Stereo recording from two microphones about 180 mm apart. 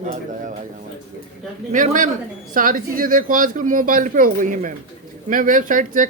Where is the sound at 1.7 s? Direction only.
45° right (ahead or behind).